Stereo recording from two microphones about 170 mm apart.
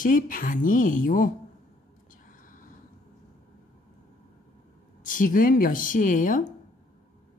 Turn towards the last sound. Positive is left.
turn(degrees=50)  # may be behind; listen again after turning